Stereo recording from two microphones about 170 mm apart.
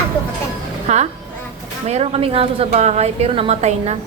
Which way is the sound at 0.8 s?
40° right (ahead or behind).